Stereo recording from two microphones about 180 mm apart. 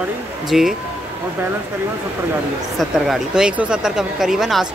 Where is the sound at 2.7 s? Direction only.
Centre (ahead or behind).